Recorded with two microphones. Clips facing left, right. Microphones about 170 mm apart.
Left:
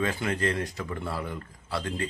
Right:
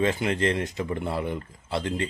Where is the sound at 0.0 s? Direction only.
25° right (ahead or behind).